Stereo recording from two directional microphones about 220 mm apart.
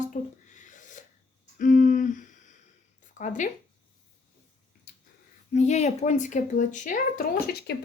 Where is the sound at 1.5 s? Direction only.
35° left (ahead or behind).